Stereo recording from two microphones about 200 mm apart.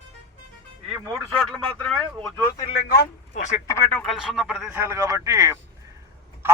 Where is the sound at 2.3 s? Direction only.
20° left (ahead or behind).